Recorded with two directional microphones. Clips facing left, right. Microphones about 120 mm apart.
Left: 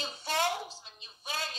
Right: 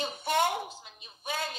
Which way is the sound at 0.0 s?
55° right (ahead or behind).